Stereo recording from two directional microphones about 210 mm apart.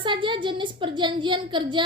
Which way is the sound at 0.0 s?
25° right (ahead or behind).